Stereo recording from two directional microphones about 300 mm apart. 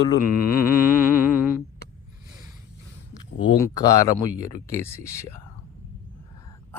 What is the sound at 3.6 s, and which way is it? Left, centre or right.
Speech, centre.